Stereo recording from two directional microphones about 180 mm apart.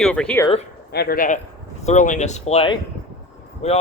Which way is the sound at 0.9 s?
60° left (ahead or behind).